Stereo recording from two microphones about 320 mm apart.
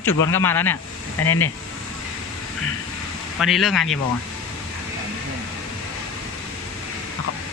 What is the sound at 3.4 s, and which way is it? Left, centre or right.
Speech, centre.